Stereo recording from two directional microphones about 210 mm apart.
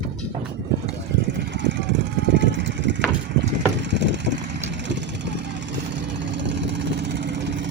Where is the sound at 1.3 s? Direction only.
60° right (ahead or behind).